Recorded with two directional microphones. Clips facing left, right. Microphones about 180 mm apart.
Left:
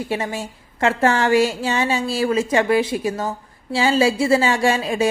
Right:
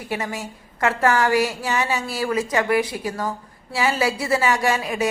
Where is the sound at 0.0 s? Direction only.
25° left (ahead or behind).